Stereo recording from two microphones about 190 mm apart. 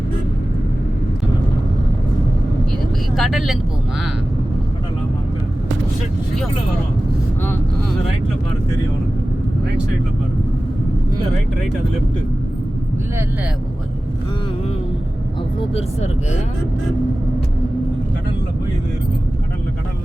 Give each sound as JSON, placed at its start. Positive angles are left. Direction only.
{"t": 3.2, "sound": "speech", "side_deg": 0}
{"t": 15.7, "sound": "speech", "side_deg": 35}